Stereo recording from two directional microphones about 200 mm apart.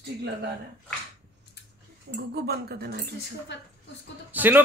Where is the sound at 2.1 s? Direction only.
50° right (ahead or behind).